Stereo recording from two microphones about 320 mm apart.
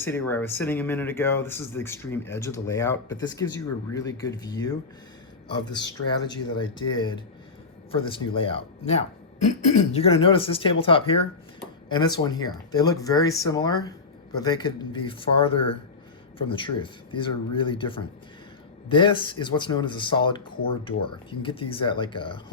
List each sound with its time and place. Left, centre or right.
0.0 s speech: centre